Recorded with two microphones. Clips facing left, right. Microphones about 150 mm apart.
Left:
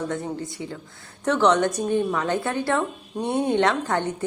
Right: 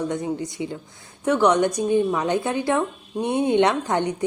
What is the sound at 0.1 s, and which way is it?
A woman's voice, 20° right (ahead or behind).